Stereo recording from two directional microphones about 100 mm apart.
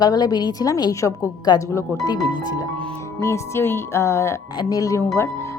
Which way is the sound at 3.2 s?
30° left (ahead or behind).